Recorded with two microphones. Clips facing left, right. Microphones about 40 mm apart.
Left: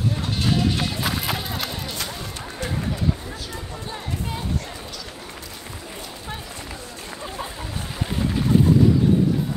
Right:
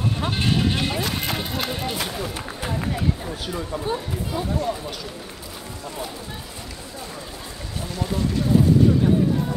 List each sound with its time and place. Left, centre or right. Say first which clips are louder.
0.5 s sheep: left 1 dB; centre
1.1 s music: even; centre
1.7 s speech: right 4 dB; centre